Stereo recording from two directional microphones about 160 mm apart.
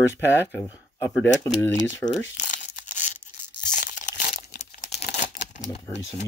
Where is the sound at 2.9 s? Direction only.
50° left (ahead or behind).